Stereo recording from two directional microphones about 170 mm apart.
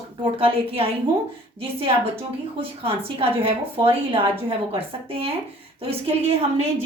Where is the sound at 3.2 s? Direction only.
30° right (ahead or behind).